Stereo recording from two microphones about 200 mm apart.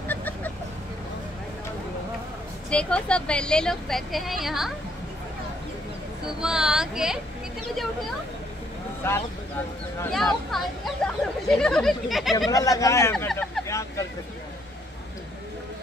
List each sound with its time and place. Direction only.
0.1 s vehicle: 10° left (ahead or behind)
2.7 s a woman's voice: 5° left (ahead or behind)
6.4 s a woman's voice: 5° right (ahead or behind)
9.0 s speech: 10° left (ahead or behind)
10.1 s a woman's voice: centre (ahead or behind)
12.4 s speech: 15° left (ahead or behind)
13.1 s a sound: 5° left (ahead or behind)